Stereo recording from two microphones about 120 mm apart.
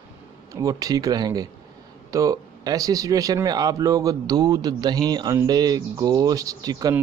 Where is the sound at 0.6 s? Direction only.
30° right (ahead or behind).